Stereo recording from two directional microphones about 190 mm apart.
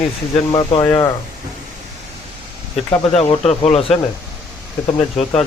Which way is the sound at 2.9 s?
30° left (ahead or behind).